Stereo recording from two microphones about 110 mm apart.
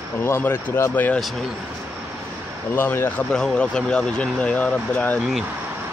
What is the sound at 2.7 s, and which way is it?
Speech, 20° left (ahead or behind).